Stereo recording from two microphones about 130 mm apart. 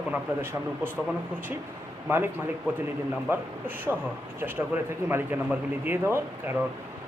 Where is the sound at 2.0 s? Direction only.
15° right (ahead or behind).